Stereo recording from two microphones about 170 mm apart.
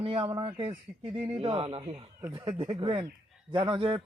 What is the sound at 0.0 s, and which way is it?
A man's voice, 35° right (ahead or behind).